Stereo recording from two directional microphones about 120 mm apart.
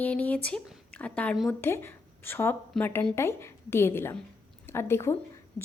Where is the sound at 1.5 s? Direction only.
20° left (ahead or behind).